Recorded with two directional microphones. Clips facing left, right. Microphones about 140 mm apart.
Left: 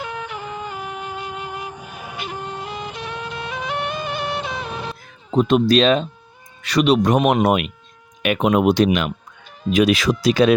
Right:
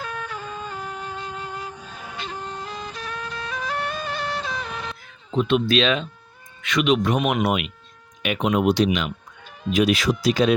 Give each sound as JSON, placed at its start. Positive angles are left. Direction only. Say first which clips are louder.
{"t": 0.0, "sound": "music", "louder": "left 3 dB", "side_deg": 15}
{"t": 2.9, "sound": "music", "louder": "left 3 dB", "side_deg": 25}
{"t": 4.0, "sound": "music", "louder": "left 3 dB", "side_deg": 5}
{"t": 4.4, "sound": "music", "louder": "left 3 dB", "side_deg": 25}
{"t": 5.3, "sound": "speech", "louder": "left 5 dB", "side_deg": 40}
{"t": 9.7, "sound": "speech", "louder": "left 3 dB", "side_deg": 90}